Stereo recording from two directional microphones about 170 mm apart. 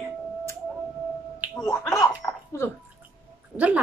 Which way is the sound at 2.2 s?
20° left (ahead or behind).